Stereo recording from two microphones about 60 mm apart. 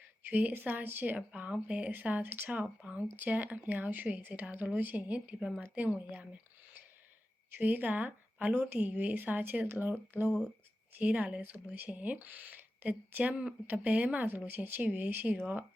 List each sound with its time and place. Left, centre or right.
0.3 s a woman's voice: right
1.3 s a woman's voice: centre
1.9 s a woman's voice: right
7.6 s a woman's voice: right
10.9 s a woman's voice: right
14.3 s speech: right